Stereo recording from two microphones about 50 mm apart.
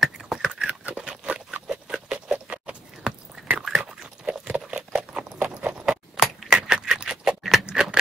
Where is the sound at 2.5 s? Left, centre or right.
Right.